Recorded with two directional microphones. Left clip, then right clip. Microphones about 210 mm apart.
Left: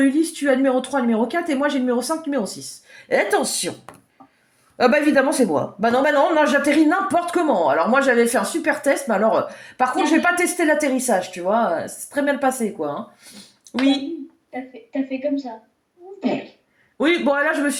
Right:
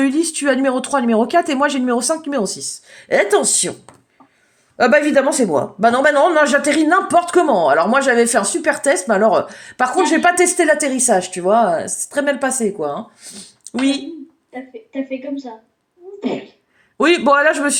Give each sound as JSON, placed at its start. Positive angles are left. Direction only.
{"t": 0.0, "sound": "speech", "side_deg": -45}
{"t": 4.8, "sound": "a man's voice", "side_deg": -25}
{"t": 17.0, "sound": "speech", "side_deg": -45}